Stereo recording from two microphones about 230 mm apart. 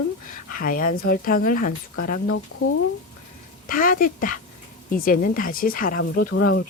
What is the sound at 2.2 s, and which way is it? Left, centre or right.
Speech, left.